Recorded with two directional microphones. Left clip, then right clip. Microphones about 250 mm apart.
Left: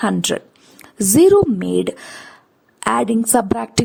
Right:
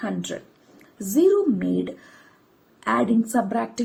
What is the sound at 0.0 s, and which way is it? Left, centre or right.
Speech, left.